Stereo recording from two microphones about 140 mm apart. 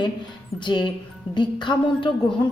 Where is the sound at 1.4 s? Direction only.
35° left (ahead or behind).